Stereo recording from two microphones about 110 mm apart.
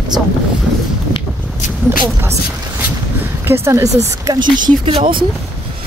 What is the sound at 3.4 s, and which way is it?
Speech, 20° right (ahead or behind).